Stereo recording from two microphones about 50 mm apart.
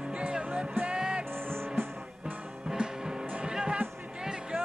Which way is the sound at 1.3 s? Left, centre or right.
Right.